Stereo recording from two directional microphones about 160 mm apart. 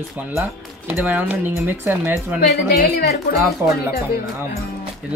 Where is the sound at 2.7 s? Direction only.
80° left.